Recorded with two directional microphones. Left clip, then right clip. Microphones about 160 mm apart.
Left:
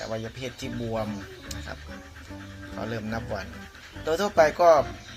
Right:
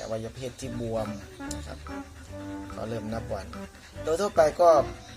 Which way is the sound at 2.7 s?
Centre (ahead or behind).